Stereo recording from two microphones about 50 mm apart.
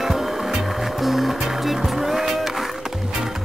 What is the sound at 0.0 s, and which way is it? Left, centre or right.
Music, centre.